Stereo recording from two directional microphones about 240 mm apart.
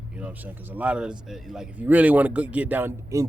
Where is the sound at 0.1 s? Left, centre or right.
Centre.